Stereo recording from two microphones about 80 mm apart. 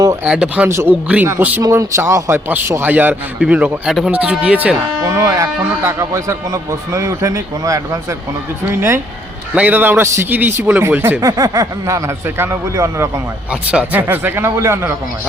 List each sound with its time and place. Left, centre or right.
0.3 s a man's voice: centre
1.7 s a man's voice: right; by 3.8 s centre
3.8 s speech: centre
4.1 s speech: centre
5.0 s speech: right
9.6 s a man's voice: right
11.2 s speech: right
13.5 s a man's voice: centre; by 14.9 s right